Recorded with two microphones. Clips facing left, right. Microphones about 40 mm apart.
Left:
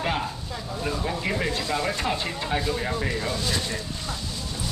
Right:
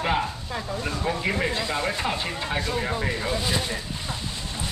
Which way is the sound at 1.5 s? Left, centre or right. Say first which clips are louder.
Even; right.